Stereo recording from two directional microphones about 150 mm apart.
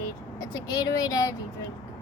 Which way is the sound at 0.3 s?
25° left (ahead or behind).